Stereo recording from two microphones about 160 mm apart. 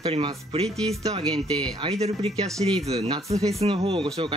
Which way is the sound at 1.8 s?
40° right (ahead or behind).